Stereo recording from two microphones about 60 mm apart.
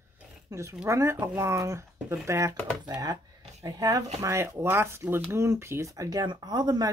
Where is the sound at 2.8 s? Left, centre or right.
Right.